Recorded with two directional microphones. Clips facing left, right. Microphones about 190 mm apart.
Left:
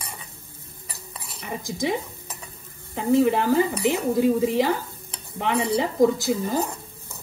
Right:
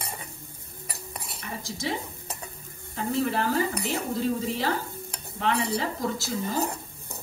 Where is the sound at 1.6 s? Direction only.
15° left (ahead or behind).